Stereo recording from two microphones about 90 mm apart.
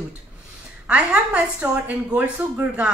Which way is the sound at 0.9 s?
10° right (ahead or behind).